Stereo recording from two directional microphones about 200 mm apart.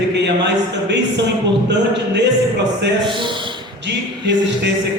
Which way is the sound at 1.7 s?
60° right (ahead or behind).